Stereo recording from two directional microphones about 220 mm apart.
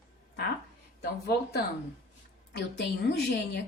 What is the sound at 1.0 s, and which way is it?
A woman's voice, 45° left (ahead or behind).